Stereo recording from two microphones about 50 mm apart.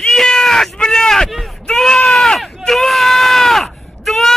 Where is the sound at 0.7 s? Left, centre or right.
Centre.